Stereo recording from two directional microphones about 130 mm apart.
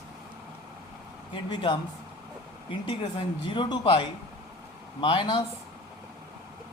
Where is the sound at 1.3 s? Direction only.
35° left (ahead or behind).